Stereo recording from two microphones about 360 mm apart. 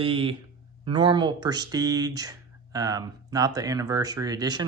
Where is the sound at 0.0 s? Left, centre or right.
Centre.